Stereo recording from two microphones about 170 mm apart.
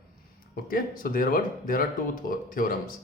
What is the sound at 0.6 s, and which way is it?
Speech, 55° left (ahead or behind).